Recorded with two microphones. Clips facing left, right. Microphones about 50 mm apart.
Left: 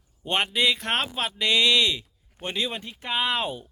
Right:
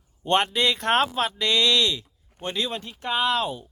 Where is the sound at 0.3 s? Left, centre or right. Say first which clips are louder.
Right 2 dB; centre.